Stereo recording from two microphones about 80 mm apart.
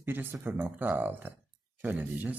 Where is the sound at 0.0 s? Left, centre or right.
Right.